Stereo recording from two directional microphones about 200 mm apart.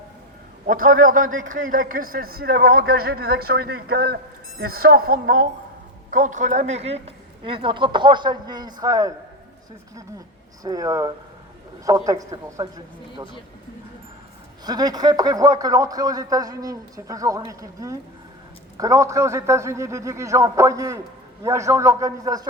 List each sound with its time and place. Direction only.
0.7 s a man's voice: 45° right (ahead or behind); by 9.1 s 15° right (ahead or behind)
10.6 s a man's voice: 15° right (ahead or behind)
14.6 s a man's voice: 20° right (ahead or behind)